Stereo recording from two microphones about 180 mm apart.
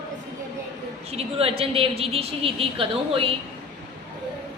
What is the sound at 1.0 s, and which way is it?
A woman's voice, 35° right (ahead or behind).